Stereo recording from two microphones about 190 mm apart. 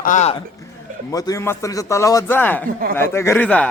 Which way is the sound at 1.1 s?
15° left (ahead or behind).